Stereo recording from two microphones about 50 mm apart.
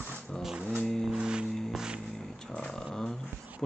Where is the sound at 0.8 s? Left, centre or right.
Centre.